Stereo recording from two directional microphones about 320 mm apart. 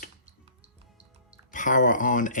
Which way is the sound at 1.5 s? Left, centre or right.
Left.